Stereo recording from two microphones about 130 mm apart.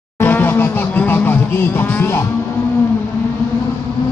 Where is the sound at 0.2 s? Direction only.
15° left (ahead or behind).